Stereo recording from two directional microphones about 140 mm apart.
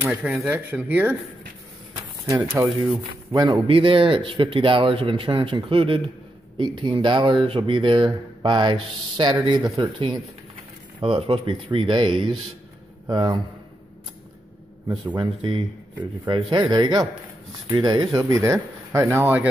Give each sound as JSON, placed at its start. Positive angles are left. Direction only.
{"t": 0.0, "sound": "speech", "side_deg": -10}
{"t": 2.0, "sound": "a sound", "side_deg": -20}
{"t": 2.5, "sound": "speech", "side_deg": -10}
{"t": 3.6, "sound": "speech", "side_deg": -40}
{"t": 15.1, "sound": "speech", "side_deg": -35}
{"t": 18.1, "sound": "speech", "side_deg": -20}